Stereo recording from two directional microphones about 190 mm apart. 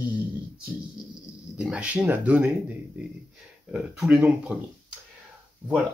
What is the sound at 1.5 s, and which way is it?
Speech, 5° right (ahead or behind).